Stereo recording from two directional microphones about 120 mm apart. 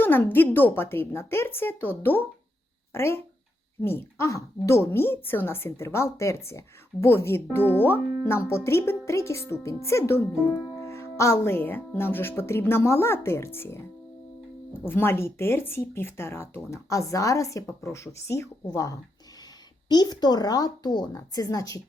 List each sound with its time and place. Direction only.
0.0 s a woman's voice: 15° left (ahead or behind)
14.8 s a woman's voice: 20° left (ahead or behind)